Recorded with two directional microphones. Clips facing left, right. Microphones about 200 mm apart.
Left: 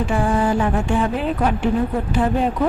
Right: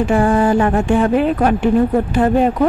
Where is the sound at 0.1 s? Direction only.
55° right (ahead or behind).